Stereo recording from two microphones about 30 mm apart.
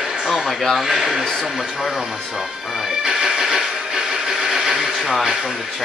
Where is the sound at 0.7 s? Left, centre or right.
Centre.